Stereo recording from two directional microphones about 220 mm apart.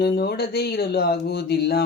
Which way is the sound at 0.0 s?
45° left (ahead or behind).